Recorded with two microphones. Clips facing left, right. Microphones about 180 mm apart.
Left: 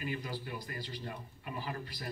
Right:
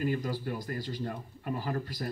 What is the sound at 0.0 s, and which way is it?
Speech, 45° right (ahead or behind).